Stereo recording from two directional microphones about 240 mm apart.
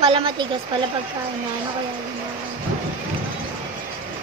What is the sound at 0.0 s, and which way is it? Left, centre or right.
Speech, right.